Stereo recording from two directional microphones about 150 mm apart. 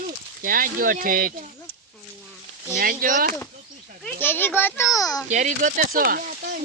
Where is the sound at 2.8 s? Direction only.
70° right (ahead or behind).